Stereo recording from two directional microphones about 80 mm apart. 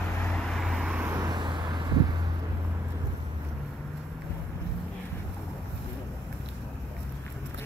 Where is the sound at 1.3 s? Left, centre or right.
Right.